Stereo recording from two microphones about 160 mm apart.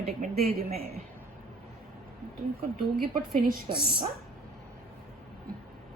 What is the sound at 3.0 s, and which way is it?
Speech, 65° right (ahead or behind).